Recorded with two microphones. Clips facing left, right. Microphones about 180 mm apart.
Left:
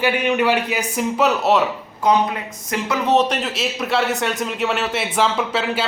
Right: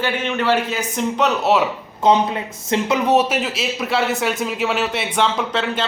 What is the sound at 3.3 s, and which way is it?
A man's voice, centre (ahead or behind).